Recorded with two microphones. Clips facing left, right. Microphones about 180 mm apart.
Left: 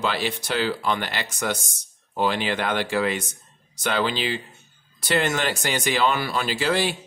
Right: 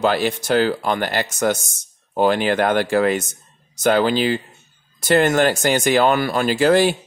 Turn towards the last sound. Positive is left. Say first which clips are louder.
# right 8 dB
turn(degrees=-45)  # may be behind; listen again after turning